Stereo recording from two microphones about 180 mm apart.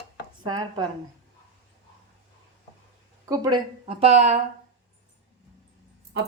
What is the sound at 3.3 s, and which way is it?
Speech, 20° right (ahead or behind).